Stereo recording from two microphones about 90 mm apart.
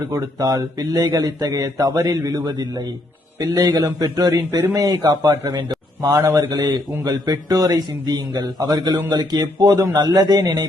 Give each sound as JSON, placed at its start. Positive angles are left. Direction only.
{"t": 0.1, "sound": "a man's voice", "side_deg": -40}
{"t": 4.4, "sound": "speech", "side_deg": -30}
{"t": 4.7, "sound": "a man's voice", "side_deg": -45}
{"t": 5.5, "sound": "a man's voice", "side_deg": -50}